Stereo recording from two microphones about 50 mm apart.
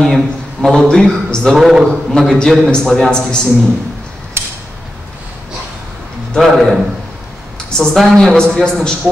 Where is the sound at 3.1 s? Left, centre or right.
Centre.